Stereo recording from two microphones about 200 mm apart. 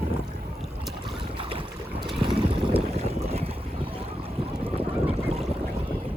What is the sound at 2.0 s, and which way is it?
Boat, 25° right (ahead or behind).